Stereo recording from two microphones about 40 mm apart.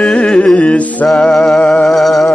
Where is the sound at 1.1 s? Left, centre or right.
Centre.